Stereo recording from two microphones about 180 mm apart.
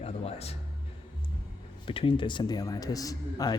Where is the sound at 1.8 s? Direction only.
30° left (ahead or behind).